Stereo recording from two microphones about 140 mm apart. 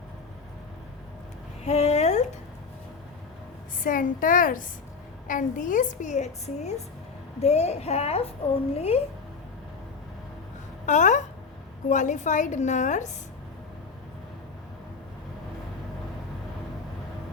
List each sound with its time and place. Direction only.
1.6 s a sound: 50° left (ahead or behind)
3.8 s a woman's voice: 75° left (ahead or behind); by 9.0 s 45° left (ahead or behind)
10.8 s a woman's voice: 60° left (ahead or behind)